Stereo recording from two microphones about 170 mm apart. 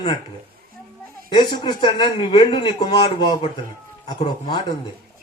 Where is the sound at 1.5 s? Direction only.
30° left (ahead or behind).